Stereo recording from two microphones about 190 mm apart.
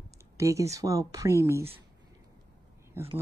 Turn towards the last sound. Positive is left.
turn(degrees=-15)  # may be behind; listen again after turning